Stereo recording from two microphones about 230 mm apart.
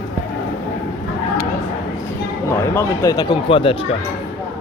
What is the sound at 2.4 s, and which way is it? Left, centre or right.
Speech, centre.